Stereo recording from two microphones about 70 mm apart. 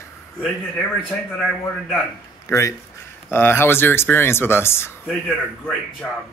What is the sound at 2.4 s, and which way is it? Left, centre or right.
Speech, left.